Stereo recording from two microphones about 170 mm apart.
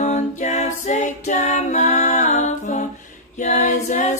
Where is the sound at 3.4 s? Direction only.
45° left (ahead or behind).